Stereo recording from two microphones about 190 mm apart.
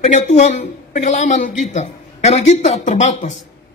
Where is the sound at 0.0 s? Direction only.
35° left (ahead or behind).